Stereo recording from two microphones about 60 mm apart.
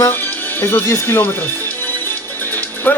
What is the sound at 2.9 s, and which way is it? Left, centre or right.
Speech, left.